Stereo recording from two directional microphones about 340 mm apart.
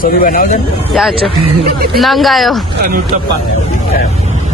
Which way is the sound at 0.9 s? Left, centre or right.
Centre.